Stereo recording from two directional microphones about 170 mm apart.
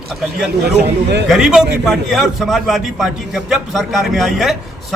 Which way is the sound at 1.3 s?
5° right (ahead or behind).